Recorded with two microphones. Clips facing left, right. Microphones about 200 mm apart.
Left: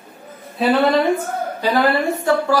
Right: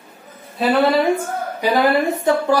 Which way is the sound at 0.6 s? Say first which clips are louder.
Even; 5° right (ahead or behind).